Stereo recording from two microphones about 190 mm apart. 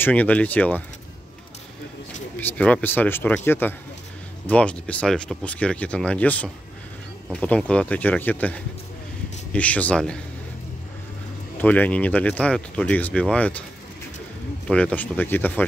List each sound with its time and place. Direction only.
0.0 s speech: 10° left (ahead or behind)
2.3 s speech: 10° left (ahead or behind)
11.5 s speech: 10° left (ahead or behind)
14.7 s speech: 5° left (ahead or behind)